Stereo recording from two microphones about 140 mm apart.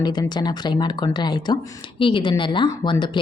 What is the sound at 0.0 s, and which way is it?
Speech, 30° left (ahead or behind).